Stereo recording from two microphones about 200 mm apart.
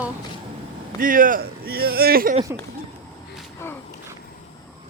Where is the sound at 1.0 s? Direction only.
45° right (ahead or behind).